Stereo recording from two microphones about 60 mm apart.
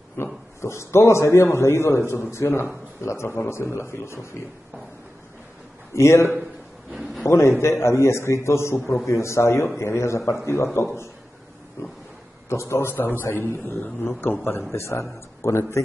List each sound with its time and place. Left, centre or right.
0.2 s a man's voice: left
5.9 s a man's voice: left
7.0 s a sound: centre
7.2 s a man's voice: left
12.4 s a man's voice: left
14.7 s a man's voice: left